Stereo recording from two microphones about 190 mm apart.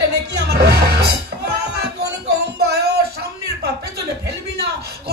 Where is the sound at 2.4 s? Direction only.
55° right (ahead or behind).